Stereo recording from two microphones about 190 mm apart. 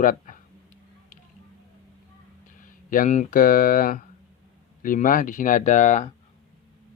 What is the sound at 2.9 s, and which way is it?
Speech, 40° left (ahead or behind).